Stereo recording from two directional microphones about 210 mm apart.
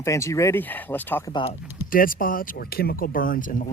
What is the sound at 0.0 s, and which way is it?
Speech, 15° left (ahead or behind).